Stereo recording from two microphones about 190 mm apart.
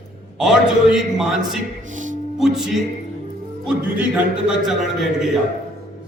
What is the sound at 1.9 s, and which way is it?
Music, 40° right (ahead or behind).